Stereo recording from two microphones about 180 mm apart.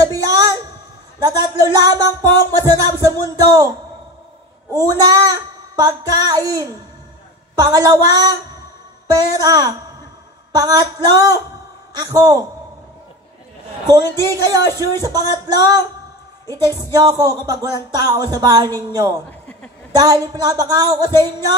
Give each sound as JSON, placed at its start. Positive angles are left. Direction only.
{"t": 0.0, "sound": "a sound", "side_deg": -20}
{"t": 1.2, "sound": "speech", "side_deg": -20}
{"t": 4.7, "sound": "speech", "side_deg": -20}
{"t": 14.2, "sound": "speech", "side_deg": -20}
{"t": 19.2, "sound": "a sound", "side_deg": 10}
{"t": 19.9, "sound": "speech", "side_deg": -20}